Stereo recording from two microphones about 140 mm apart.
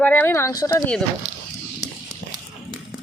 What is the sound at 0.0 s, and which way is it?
Speech, 15° left (ahead or behind).